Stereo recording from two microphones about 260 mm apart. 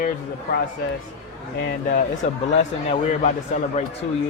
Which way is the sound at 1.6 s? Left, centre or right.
Left.